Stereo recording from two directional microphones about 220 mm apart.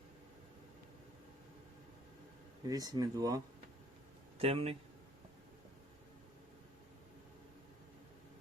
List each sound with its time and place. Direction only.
2.6 s speech: 15° right (ahead or behind)